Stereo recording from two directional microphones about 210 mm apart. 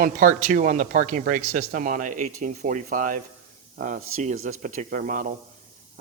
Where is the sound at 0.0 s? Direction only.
40° right (ahead or behind).